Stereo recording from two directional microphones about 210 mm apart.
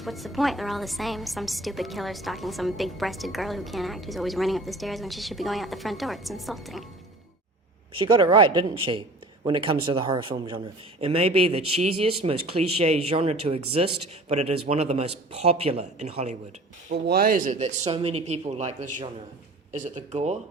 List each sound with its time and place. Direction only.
0.0 s a woman's voice: centre (ahead or behind)
7.9 s a man's voice: 20° right (ahead or behind)
16.9 s a man's voice: 45° right (ahead or behind)